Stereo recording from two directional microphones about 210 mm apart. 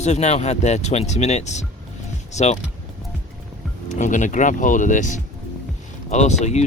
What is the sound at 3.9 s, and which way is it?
Speech, 35° left (ahead or behind).